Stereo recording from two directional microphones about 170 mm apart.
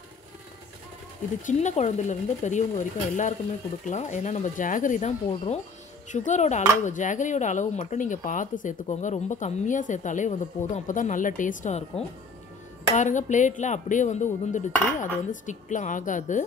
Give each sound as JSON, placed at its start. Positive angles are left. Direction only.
{"t": 1.4, "sound": "speech", "side_deg": 45}
{"t": 5.3, "sound": "speech", "side_deg": 35}
{"t": 12.9, "sound": "speech", "side_deg": 45}